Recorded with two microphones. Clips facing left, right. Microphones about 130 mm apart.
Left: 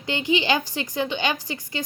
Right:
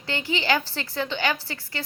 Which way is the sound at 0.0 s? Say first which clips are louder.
Left 5 dB; 15° left (ahead or behind).